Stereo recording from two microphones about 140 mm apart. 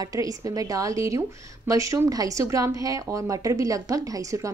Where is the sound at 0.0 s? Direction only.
25° right (ahead or behind).